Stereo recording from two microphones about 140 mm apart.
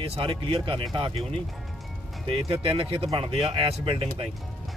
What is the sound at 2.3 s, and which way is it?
Speech, 40° right (ahead or behind).